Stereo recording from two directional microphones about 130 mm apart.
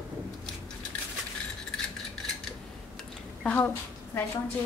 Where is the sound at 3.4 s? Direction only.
10° left (ahead or behind).